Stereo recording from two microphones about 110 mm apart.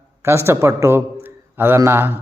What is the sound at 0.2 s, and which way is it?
A man's voice, 25° right (ahead or behind).